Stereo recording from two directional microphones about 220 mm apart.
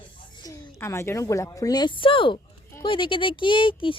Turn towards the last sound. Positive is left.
turn(degrees=20)  # may be behind; listen again after turning